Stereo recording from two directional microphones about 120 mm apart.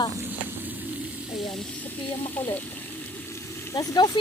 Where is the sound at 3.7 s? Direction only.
30° left (ahead or behind).